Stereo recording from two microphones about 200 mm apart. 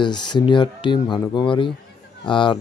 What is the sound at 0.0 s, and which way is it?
Speech, 20° left (ahead or behind).